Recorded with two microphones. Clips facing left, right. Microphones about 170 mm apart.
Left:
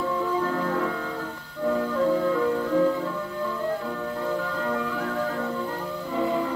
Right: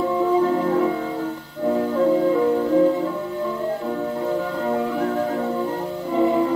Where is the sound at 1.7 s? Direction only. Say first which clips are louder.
Right 4 dB; 30° right (ahead or behind).